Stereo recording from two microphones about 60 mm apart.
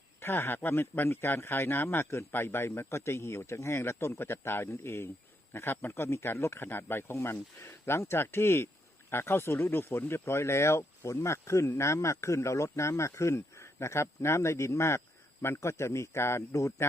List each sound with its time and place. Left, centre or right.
0.2 s speech: left
5.5 s speech: left
5.9 s speech: left
16.5 s speech: left